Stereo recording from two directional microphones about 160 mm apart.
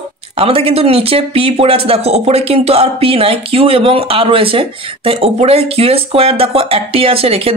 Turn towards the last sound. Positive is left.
turn(degrees=-35)  # may be behind; listen again after turning